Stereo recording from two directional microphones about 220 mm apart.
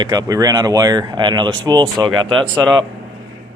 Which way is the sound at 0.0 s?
15° right (ahead or behind).